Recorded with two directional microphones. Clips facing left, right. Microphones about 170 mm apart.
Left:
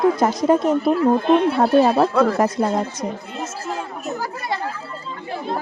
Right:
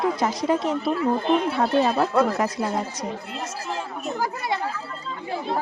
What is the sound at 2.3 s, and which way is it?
Speech, 45° left (ahead or behind).